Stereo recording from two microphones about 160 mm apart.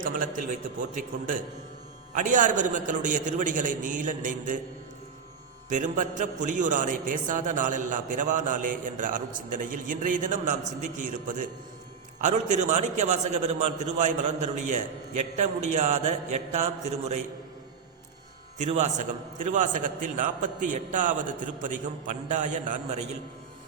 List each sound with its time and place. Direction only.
0.0 s a man's voice: 55° right (ahead or behind)
2.1 s a man's voice: 50° right (ahead or behind)
5.6 s a man's voice: 50° right (ahead or behind)
18.6 s a man's voice: 45° right (ahead or behind)